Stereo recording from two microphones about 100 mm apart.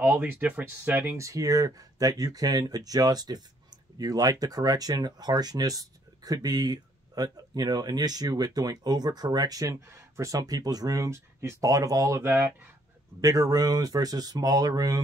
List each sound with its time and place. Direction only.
0.0 s speech: 15° right (ahead or behind)
1.1 s speech: 30° right (ahead or behind)